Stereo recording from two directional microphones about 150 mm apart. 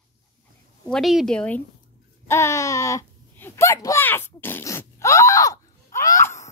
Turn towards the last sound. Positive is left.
turn(degrees=20)  # may be behind; listen again after turning